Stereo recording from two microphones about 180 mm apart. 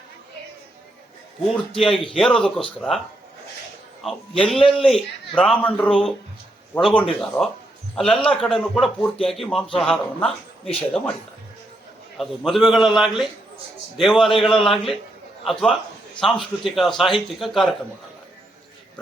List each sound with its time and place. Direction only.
1.9 s a man's voice: 30° left (ahead or behind)
2.1 s a man's voice: centre (ahead or behind)
4.0 s a man's voice: centre (ahead or behind)
12.1 s a man's voice: centre (ahead or behind)